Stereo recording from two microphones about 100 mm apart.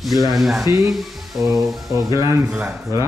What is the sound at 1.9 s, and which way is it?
Speech, 35° right (ahead or behind).